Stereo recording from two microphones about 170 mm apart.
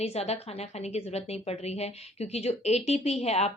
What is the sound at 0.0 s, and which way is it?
A woman's voice, 35° left (ahead or behind).